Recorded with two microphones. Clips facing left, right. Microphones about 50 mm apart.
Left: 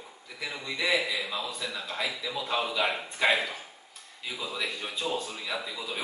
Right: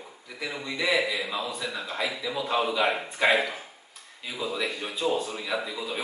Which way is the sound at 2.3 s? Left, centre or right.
Centre.